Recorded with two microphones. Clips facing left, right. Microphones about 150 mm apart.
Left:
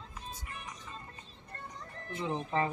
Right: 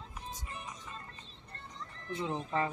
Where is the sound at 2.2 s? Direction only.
20° left (ahead or behind).